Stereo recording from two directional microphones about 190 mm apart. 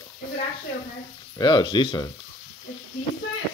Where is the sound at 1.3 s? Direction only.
25° left (ahead or behind).